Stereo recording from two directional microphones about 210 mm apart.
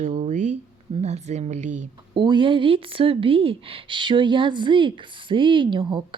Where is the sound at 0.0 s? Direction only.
35° right (ahead or behind).